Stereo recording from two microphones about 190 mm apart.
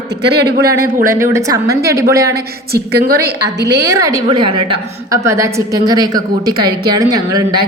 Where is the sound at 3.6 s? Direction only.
15° right (ahead or behind).